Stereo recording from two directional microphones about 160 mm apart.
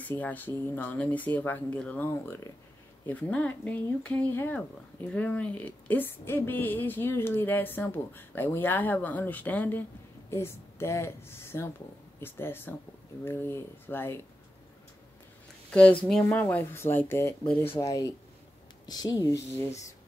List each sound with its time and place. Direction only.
0.0 s speech: 10° left (ahead or behind)
15.7 s speech: 10° left (ahead or behind)